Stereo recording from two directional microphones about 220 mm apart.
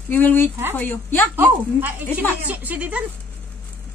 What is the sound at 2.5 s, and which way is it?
Speech, 5° right (ahead or behind).